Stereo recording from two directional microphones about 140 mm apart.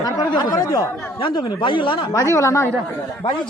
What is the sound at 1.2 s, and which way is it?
Speech, 35° left (ahead or behind).